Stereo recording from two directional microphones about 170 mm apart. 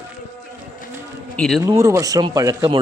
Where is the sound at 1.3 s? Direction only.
5° left (ahead or behind).